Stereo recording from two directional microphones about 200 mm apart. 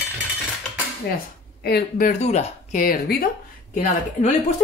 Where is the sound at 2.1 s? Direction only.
35° left (ahead or behind).